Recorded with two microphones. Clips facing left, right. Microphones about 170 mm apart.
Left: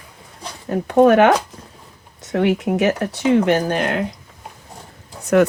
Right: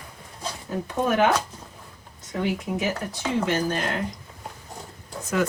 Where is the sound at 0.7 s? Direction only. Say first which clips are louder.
Left 12 dB; 70° left (ahead or behind).